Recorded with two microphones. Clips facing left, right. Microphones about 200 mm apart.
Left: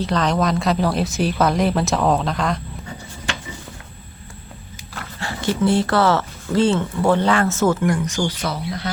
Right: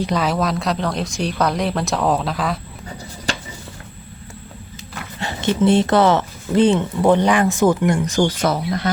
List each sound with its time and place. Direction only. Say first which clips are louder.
0.0 s speech: even; 10° right (ahead or behind)
3.3 s a sound: right 3 dB; 40° right (ahead or behind)
5.2 s speech: right 3 dB; 20° right (ahead or behind)
8.0 s speech: right 5 dB; 40° right (ahead or behind)